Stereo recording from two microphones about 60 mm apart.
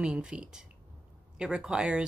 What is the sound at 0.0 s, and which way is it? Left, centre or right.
Speech, centre.